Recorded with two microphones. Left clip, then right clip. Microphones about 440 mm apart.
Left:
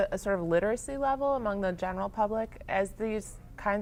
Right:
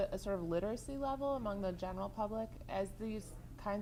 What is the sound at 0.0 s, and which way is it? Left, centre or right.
A woman's voice, left.